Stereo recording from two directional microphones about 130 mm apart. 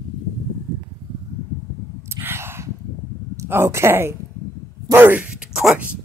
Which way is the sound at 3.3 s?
20° right (ahead or behind).